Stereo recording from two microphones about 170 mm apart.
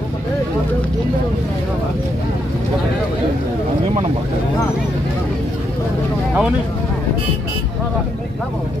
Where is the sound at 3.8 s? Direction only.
40° right (ahead or behind).